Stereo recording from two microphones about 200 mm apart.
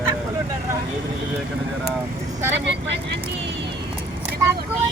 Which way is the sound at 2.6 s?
60° right (ahead or behind).